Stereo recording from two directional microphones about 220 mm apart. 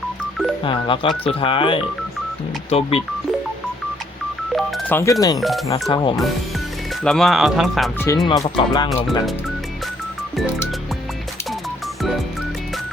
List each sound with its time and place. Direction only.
0.6 s speech: 20° left (ahead or behind)
4.5 s telephone dialing: 10° left (ahead or behind)
5.4 s speech: centre (ahead or behind)
5.9 s speech: 20° left (ahead or behind)
7.0 s speech: centre (ahead or behind)
7.9 s speech: 15° left (ahead or behind)